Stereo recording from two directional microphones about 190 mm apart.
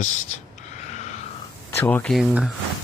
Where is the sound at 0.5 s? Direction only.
35° left (ahead or behind).